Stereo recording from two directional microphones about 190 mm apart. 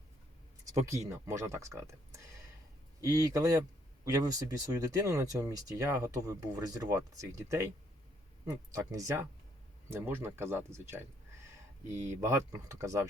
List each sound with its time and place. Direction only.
0.6 s speech: 15° right (ahead or behind)